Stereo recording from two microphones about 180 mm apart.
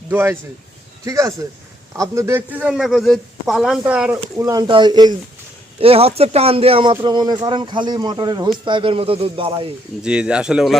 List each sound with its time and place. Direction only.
0.1 s a man's voice: 10° right (ahead or behind)
4.4 s speech: 20° right (ahead or behind)
10.0 s a man's voice: 5° right (ahead or behind)